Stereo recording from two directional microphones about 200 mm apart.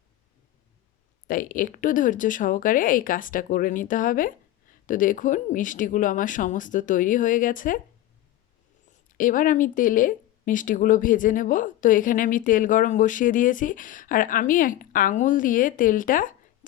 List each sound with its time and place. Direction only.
1.3 s speech: 45° left (ahead or behind)
9.1 s speech: 40° left (ahead or behind)